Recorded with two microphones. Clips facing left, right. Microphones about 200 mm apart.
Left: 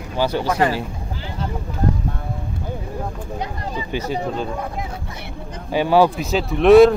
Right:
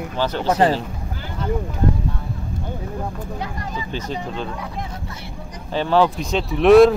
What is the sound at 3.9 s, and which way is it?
Speech, 10° left (ahead or behind).